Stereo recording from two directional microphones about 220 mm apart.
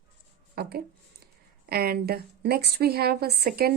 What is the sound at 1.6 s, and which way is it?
A woman's voice, 45° right (ahead or behind).